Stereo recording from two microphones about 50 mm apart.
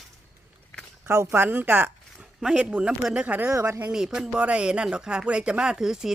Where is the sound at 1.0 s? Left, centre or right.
Right.